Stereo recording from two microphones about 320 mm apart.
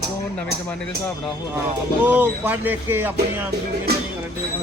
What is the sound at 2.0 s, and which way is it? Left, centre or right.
Speech, centre.